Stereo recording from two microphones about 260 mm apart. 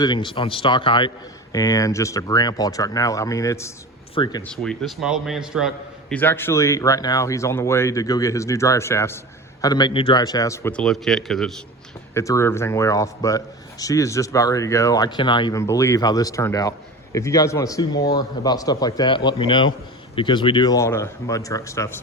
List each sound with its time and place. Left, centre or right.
0.0 s a man's voice: centre
4.4 s a man's voice: centre